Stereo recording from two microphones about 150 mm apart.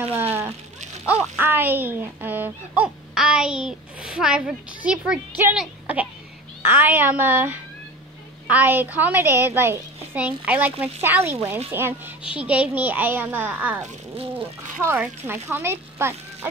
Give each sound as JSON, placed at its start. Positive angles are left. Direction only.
{"t": 0.2, "sound": "a woman's voice", "side_deg": -15}